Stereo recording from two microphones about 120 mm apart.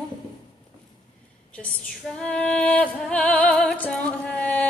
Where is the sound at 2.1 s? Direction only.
10° left (ahead or behind).